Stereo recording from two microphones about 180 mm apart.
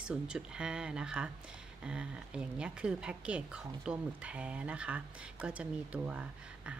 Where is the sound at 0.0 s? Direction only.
5° right (ahead or behind).